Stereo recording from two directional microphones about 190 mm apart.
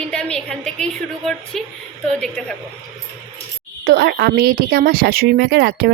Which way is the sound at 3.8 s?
55° right (ahead or behind).